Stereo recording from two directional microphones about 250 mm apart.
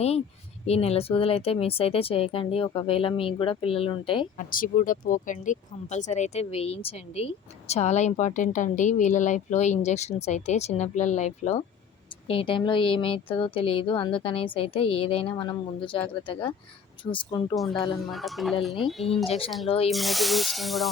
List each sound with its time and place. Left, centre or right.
0.7 s speech: left
4.4 s speech: left; by 17.6 s centre
18.0 s speech: centre
19.6 s speech: left
19.9 s speech: centre